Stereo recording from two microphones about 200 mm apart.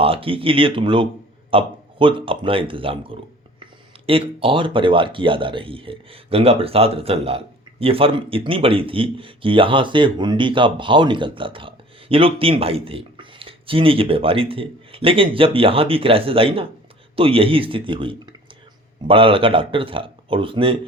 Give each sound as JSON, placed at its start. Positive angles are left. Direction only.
{"t": 0.0, "sound": "speech", "side_deg": -25}